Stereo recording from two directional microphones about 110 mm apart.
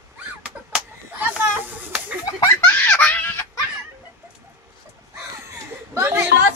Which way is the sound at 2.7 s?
15° left (ahead or behind).